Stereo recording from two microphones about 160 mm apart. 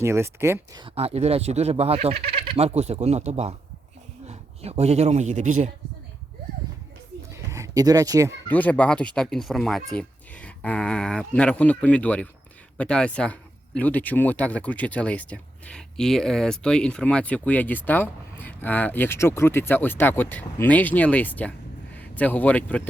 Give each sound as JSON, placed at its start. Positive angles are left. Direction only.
{"t": 0.0, "sound": "speech", "side_deg": -15}
{"t": 0.8, "sound": "a man's voice", "side_deg": -35}
{"t": 7.3, "sound": "a sound", "side_deg": -20}
{"t": 8.4, "sound": "a man's voice", "side_deg": 10}